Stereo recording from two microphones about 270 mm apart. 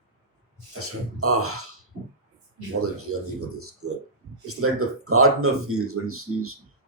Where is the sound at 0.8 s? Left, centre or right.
Right.